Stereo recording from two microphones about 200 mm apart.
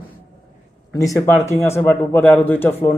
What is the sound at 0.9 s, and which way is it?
Speech, 15° left (ahead or behind).